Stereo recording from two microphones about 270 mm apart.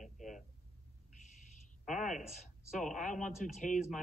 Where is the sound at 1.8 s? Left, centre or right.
Centre.